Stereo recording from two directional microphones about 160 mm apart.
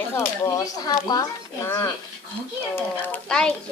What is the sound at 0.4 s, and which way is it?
Speech, 25° left (ahead or behind).